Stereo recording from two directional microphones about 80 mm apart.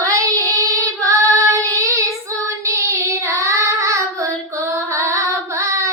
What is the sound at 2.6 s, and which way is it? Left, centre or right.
Child singing, right.